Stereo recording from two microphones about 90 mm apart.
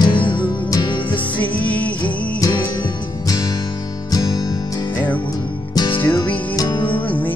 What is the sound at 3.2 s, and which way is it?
Music, 40° left (ahead or behind).